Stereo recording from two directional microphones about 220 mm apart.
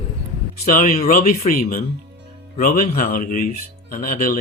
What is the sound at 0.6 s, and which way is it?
Speech, 40° left (ahead or behind).